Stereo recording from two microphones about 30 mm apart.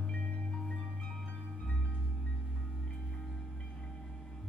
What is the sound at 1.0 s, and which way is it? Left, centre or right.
Music, centre.